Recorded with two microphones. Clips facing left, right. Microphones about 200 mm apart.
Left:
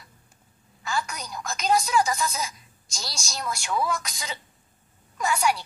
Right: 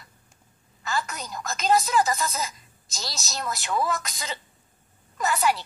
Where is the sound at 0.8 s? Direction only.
Centre (ahead or behind).